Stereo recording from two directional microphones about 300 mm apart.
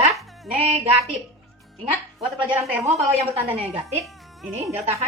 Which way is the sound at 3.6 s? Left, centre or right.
Centre.